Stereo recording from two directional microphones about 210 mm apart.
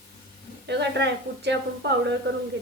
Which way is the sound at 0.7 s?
55° right (ahead or behind).